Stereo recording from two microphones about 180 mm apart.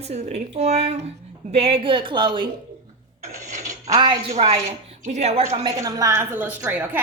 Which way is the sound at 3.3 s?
45° right (ahead or behind).